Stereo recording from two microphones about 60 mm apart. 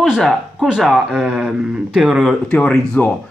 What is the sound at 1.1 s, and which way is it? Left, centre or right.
Mantra, centre.